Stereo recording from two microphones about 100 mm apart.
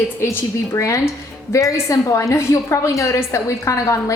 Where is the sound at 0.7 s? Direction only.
30° left (ahead or behind).